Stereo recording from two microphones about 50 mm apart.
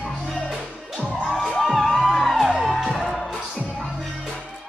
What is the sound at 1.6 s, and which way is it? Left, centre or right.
Music, centre.